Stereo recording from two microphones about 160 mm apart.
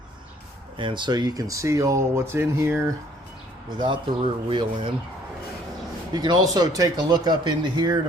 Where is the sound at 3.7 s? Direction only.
30° right (ahead or behind).